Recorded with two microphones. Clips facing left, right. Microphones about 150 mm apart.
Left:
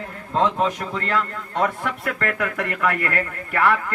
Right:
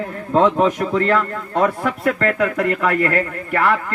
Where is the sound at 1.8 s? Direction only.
30° right (ahead or behind).